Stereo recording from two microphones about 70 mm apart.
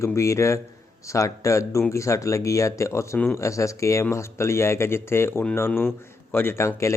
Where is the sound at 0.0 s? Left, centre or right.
Left.